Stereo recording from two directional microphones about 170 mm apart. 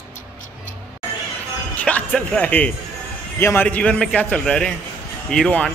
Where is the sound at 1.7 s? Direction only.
10° left (ahead or behind).